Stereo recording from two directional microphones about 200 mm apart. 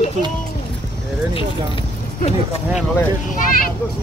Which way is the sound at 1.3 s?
30° left (ahead or behind).